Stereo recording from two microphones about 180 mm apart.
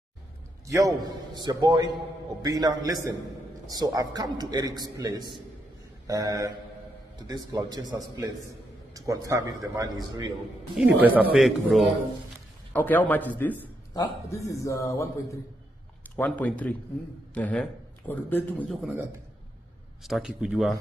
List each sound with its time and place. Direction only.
0.7 s a man's voice: 20° right (ahead or behind)
10.8 s a man's voice: 5° right (ahead or behind)
12.7 s a man's voice: 10° left (ahead or behind)